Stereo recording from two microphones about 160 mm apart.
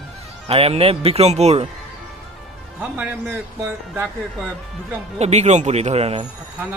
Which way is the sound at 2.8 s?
10° right (ahead or behind).